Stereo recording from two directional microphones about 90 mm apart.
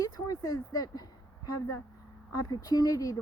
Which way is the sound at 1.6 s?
35° left (ahead or behind).